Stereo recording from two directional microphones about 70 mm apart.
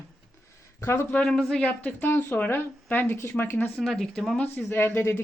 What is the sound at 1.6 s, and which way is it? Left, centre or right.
A woman's voice, centre.